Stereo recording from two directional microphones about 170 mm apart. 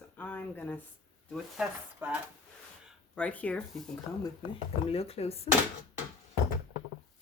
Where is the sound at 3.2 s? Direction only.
10° left (ahead or behind).